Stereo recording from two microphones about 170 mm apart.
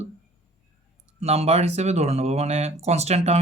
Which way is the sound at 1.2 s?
40° right (ahead or behind).